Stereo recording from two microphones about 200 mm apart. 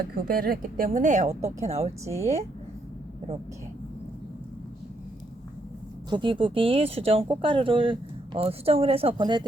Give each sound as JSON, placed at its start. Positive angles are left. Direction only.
{"t": 0.0, "sound": "a woman's voice", "side_deg": -50}
{"t": 6.1, "sound": "speech", "side_deg": -25}